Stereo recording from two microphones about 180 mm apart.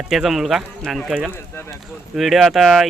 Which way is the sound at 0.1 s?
Centre (ahead or behind).